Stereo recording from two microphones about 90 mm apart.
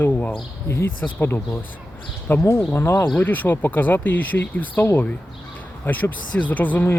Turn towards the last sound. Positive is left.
turn(degrees=20)  # may be behind; listen again after turning